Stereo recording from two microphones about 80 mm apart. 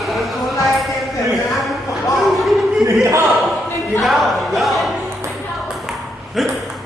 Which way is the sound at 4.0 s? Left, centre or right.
Centre.